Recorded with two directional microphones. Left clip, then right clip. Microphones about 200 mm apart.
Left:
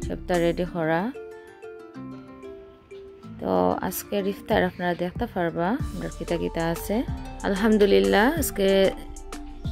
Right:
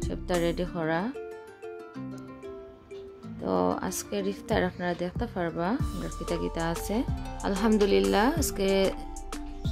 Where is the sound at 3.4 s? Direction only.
10° left (ahead or behind).